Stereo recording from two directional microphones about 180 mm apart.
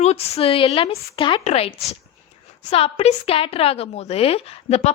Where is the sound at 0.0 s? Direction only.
35° left (ahead or behind).